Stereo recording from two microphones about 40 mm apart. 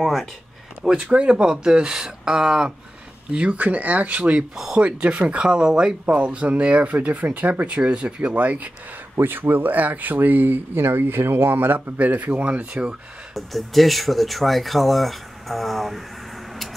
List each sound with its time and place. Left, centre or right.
0.0 s speech: centre
0.8 s speech: centre
3.3 s speech: right
4.2 s speech: right
5.5 s speech: centre
6.0 s speech: right
7.6 s speech: right
9.1 s speech: right
12.0 s speech: right
13.3 s speech: centre